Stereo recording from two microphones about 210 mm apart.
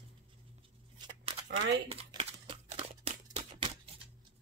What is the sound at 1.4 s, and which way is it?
Speech, 55° right (ahead or behind).